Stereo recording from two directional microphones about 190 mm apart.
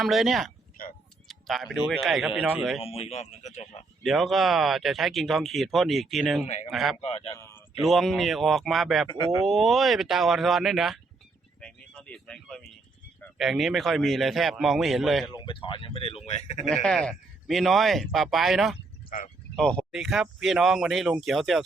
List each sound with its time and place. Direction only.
0.0 s speech: centre (ahead or behind)
2.8 s speech: 30° left (ahead or behind)
4.0 s speech: centre (ahead or behind)
6.4 s speech: 35° left (ahead or behind)
6.7 s speech: centre (ahead or behind)
6.9 s speech: 30° left (ahead or behind)
7.3 s a man's voice: 15° left (ahead or behind)
7.8 s speech: centre (ahead or behind)
9.0 s speech: 25° left (ahead or behind)
9.4 s speech: centre (ahead or behind)
15.3 s speech: 25° left (ahead or behind)
16.6 s speech: 5° left (ahead or behind)